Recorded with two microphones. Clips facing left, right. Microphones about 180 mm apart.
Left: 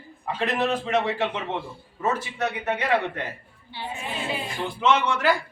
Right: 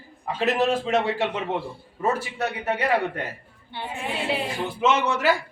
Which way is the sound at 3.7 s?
55° right (ahead or behind).